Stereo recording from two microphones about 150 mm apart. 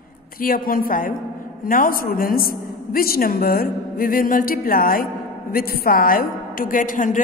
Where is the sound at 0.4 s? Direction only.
70° left (ahead or behind).